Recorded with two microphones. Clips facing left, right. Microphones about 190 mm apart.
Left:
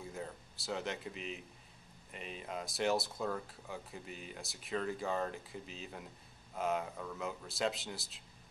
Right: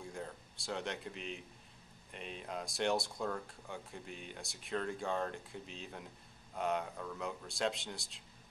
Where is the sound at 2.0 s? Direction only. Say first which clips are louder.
Even; centre (ahead or behind).